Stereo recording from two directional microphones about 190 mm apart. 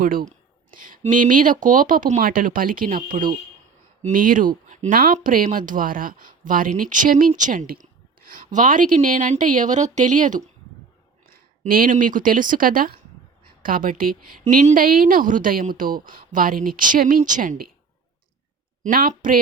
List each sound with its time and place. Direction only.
0.0 s speech: 50° right (ahead or behind)
18.9 s speech: 50° right (ahead or behind)